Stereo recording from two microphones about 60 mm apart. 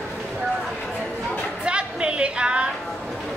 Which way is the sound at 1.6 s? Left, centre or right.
Centre.